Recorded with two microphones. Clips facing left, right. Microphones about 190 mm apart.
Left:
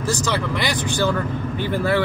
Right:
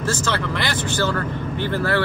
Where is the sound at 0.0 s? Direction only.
15° left (ahead or behind).